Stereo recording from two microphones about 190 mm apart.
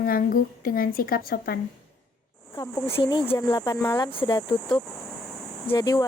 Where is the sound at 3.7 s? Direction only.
10° left (ahead or behind).